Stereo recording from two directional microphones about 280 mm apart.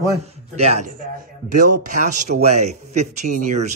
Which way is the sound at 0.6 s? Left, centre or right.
Right.